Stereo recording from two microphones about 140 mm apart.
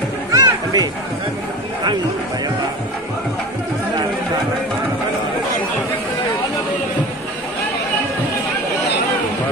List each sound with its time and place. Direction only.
0.3 s music: 25° right (ahead or behind)